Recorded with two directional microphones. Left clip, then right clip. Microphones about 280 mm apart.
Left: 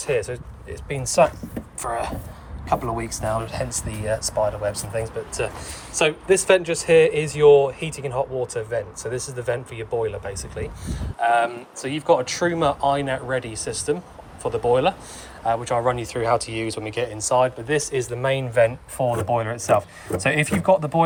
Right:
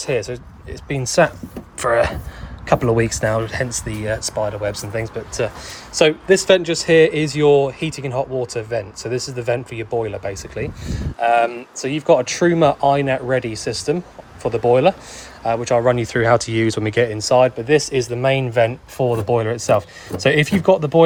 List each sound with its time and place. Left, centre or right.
0.0 s speech: right